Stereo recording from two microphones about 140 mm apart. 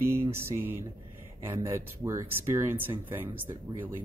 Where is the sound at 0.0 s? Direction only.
20° right (ahead or behind).